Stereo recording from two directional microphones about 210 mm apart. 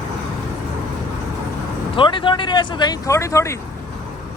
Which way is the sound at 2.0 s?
25° left (ahead or behind).